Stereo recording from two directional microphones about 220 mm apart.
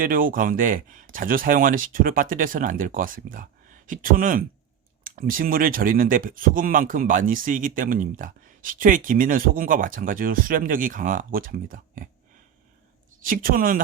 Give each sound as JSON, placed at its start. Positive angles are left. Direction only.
{"t": 0.0, "sound": "speech", "side_deg": -40}
{"t": 13.2, "sound": "speech", "side_deg": -40}